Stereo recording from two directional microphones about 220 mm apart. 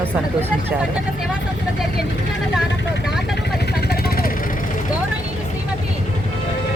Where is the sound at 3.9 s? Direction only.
40° left (ahead or behind).